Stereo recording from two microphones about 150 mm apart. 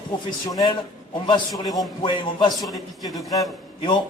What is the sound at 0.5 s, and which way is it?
A man's voice, 25° left (ahead or behind).